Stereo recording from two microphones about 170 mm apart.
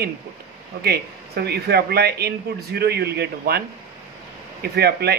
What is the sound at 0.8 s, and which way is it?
Speech, 70° right (ahead or behind).